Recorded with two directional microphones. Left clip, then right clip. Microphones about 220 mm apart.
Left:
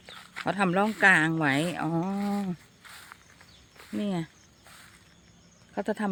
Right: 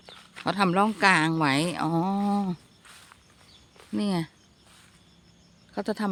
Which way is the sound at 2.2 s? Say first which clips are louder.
Right 4 dB; 30° right (ahead or behind).